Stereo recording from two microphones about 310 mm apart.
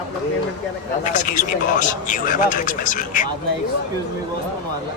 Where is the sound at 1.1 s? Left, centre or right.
Left.